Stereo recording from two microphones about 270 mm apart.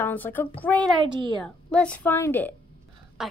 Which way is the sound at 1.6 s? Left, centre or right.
Centre.